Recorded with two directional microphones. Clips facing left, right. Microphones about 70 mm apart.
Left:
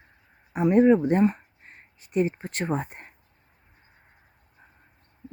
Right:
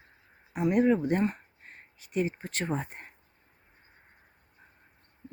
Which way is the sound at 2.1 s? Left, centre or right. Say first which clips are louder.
Left 5 dB; left.